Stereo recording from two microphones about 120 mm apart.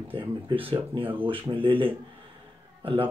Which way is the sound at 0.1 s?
45° right (ahead or behind).